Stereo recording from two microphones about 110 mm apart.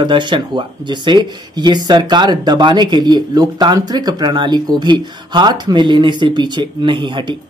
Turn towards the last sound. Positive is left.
turn(degrees=-45)  # may be behind; listen again after turning